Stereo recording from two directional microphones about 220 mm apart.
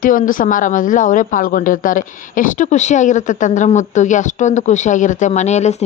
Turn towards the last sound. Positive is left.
turn(degrees=30)  # may be behind; listen again after turning